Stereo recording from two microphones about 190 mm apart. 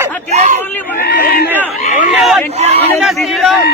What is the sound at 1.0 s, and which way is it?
Crowd, 60° left (ahead or behind).